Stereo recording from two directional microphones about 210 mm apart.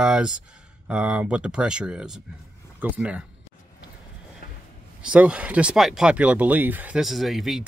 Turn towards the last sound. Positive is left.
turn(degrees=0)  # may be behind; listen again after turning